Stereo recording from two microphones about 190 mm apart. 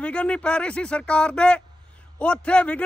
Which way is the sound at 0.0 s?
5° left (ahead or behind).